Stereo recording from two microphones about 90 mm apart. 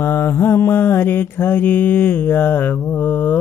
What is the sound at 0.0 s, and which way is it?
Mantra, 30° left (ahead or behind).